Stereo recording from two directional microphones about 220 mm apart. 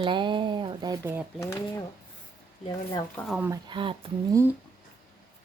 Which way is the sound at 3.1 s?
Centre (ahead or behind).